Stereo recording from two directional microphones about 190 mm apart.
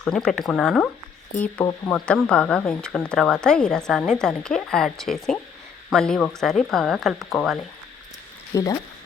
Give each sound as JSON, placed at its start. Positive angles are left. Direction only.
{"t": 0.0, "sound": "speech", "side_deg": 5}
{"t": 1.9, "sound": "speech", "side_deg": 5}
{"t": 8.5, "sound": "speech", "side_deg": 15}